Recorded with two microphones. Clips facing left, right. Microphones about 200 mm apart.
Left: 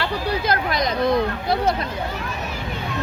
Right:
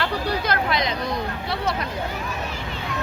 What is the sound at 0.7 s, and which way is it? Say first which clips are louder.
Speech: left 1 dB; 45° left (ahead or behind).